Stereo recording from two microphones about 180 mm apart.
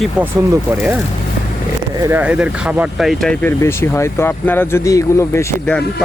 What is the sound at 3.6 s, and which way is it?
Speech, 15° left (ahead or behind).